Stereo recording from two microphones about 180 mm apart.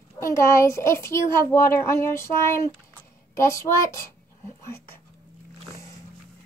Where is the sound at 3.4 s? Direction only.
15° left (ahead or behind).